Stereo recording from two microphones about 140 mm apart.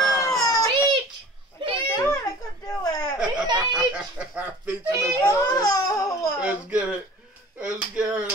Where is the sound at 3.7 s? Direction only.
5° right (ahead or behind).